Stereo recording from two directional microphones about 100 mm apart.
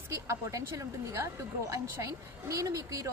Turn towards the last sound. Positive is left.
turn(degrees=-35)  # may be behind; listen again after turning